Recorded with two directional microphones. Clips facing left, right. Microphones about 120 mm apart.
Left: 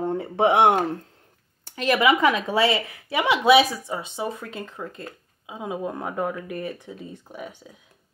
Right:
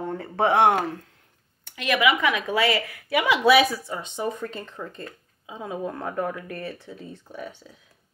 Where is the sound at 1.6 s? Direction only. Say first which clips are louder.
Left 2 dB; 35° left (ahead or behind); by 7.6 s 15° left (ahead or behind).